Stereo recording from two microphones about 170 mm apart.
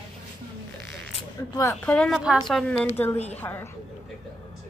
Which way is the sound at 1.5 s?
20° left (ahead or behind).